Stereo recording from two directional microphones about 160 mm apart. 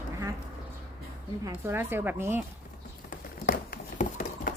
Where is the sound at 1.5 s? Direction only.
15° right (ahead or behind).